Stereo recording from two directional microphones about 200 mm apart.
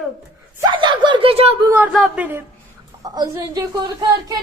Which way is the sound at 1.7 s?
5° right (ahead or behind).